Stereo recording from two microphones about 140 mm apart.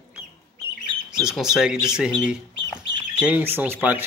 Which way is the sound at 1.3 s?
5° right (ahead or behind).